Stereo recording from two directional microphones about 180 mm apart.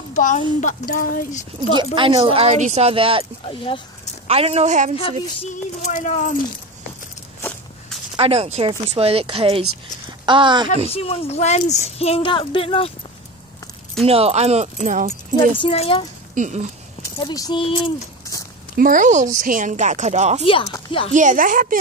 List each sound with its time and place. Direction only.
0.1 s speech: 45° left (ahead or behind)
2.0 s speech: 30° right (ahead or behind)
3.4 s speech: 30° left (ahead or behind)
4.3 s speech: 35° right (ahead or behind)
4.9 s a woman's voice: 35° left (ahead or behind)
8.2 s speech: 35° right (ahead or behind)
10.9 s a woman's voice: 35° left (ahead or behind)
14.0 s speech: 35° right (ahead or behind)
15.5 s a woman's voice: 30° left (ahead or behind)
16.3 s speech: 40° right (ahead or behind)
17.2 s speech: 20° left (ahead or behind)
18.3 s a sound: 20° left (ahead or behind)
18.8 s a woman's voice: 45° right (ahead or behind)